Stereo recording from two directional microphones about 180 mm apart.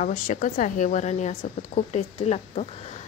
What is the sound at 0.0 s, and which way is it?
A woman's voice, 45° left (ahead or behind).